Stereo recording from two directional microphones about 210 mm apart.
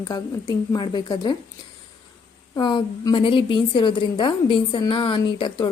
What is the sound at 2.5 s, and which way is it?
A woman's voice, 20° left (ahead or behind).